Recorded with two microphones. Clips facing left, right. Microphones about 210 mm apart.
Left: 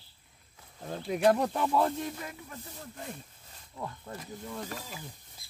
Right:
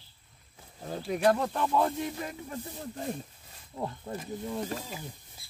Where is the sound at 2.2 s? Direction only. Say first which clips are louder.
Right 5 dB; 35° right (ahead or behind).